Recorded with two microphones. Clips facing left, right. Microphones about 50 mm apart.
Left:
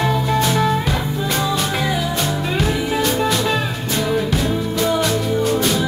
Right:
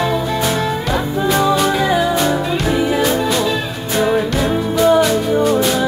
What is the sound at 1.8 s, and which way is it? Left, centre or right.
Music, right.